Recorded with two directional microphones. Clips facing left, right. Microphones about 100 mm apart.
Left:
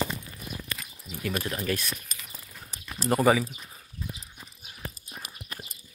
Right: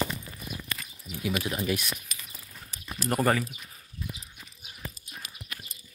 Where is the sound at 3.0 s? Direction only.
5° left (ahead or behind).